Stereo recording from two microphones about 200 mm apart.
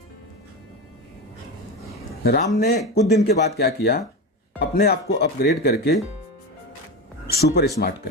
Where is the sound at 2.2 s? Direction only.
50° left (ahead or behind).